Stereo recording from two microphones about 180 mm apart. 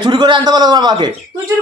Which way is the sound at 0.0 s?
25° right (ahead or behind).